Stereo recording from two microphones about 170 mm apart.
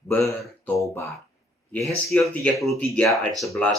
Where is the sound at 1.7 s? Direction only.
Centre (ahead or behind).